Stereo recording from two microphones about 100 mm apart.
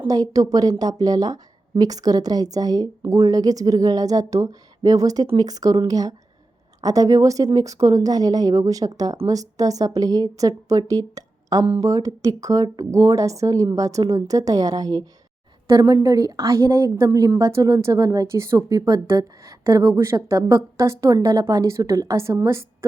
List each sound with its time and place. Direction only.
0.1 s a woman's voice: 35° right (ahead or behind)